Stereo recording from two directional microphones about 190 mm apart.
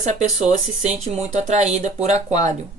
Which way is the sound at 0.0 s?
40° right (ahead or behind).